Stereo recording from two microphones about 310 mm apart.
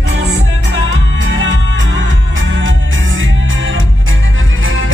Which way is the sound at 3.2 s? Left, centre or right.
Right.